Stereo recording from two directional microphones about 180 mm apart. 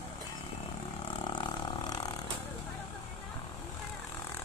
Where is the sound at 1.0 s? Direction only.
25° left (ahead or behind).